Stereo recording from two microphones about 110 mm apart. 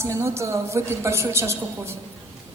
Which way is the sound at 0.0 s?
25° right (ahead or behind).